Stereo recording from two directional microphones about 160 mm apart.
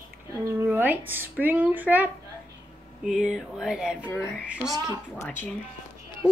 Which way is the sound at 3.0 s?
5° right (ahead or behind).